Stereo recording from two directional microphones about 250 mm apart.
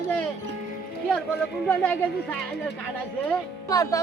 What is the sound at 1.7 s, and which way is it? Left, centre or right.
Speech, centre.